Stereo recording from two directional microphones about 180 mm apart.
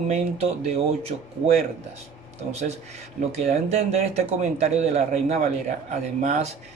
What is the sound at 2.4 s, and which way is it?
Speech, 40° right (ahead or behind).